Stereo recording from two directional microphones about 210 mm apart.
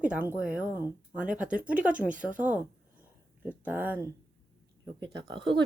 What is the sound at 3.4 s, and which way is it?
Speech, 10° right (ahead or behind).